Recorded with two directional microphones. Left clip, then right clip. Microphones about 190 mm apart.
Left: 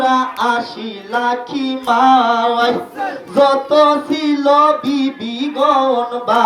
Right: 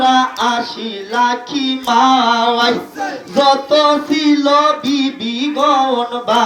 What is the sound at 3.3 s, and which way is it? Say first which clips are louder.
Music: even; 65° left (ahead or behind).